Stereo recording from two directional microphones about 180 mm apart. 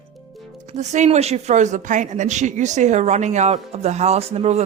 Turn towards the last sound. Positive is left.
turn(degrees=-35)  # may be behind; listen again after turning